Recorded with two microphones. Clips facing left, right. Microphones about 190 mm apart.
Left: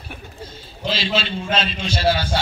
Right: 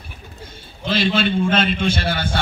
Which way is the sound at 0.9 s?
55° right (ahead or behind).